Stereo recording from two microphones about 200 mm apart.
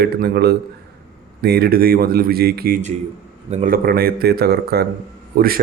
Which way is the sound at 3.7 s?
50° right (ahead or behind).